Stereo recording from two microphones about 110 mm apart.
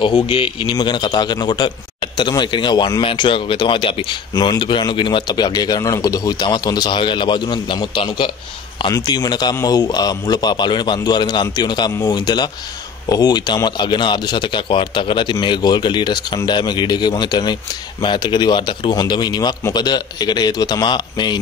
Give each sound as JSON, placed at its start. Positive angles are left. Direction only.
{"t": 0.0, "sound": "speech", "side_deg": 50}
{"t": 0.7, "sound": "speech", "side_deg": 40}
{"t": 4.3, "sound": "speech", "side_deg": 40}